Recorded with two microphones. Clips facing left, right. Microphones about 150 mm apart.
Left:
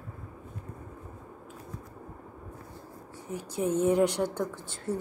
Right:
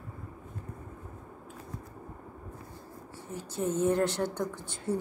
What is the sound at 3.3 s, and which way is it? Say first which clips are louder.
A woman's voice: left 3 dB; 15° left (ahead or behind).